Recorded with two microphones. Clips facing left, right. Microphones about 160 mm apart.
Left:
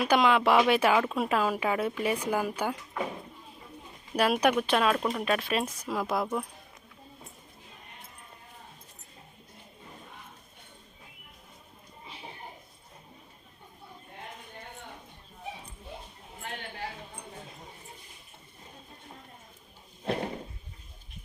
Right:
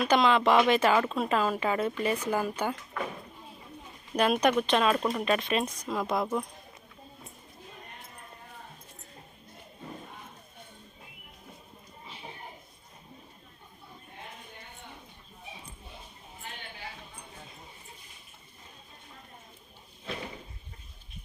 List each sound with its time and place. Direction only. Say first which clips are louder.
0.0 s speech: even; 10° left (ahead or behind)
4.1 s speech: even; 5° left (ahead or behind)
20.1 s a sound: left 8 dB; 50° left (ahead or behind)